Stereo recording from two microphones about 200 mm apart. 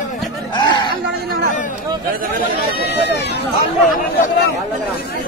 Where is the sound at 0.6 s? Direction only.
20° left (ahead or behind).